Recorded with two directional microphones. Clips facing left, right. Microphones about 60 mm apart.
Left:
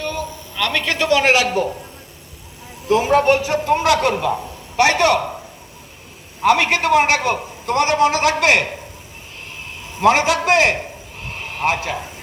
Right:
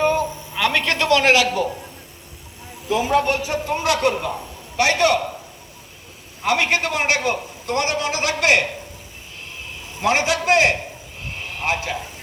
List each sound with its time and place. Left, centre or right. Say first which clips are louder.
0.0 s a sound: right 6 dB; right
0.6 s a man's voice: right 1 dB; centre
0.9 s a man's voice: left 2 dB; centre
2.9 s a man's voice: left 4 dB; left
4.8 s a man's voice: left 3 dB; left
6.4 s a man's voice: left 4 dB; left
10.0 s a man's voice: left 5 dB; left